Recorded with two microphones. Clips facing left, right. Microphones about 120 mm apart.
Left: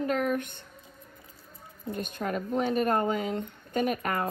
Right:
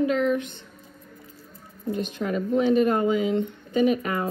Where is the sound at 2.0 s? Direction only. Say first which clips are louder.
Right 4 dB; 50° left (ahead or behind).